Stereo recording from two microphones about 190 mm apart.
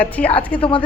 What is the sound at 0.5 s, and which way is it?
Speech, 25° left (ahead or behind).